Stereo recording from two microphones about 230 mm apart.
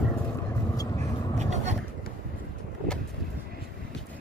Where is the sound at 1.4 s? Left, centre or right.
Right.